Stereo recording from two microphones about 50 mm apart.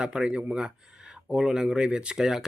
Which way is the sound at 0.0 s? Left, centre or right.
Centre.